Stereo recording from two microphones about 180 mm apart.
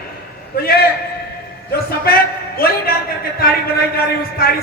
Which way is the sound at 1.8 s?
60° left (ahead or behind).